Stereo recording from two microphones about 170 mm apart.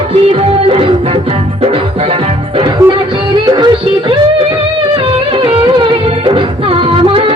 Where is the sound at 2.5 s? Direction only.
25° right (ahead or behind).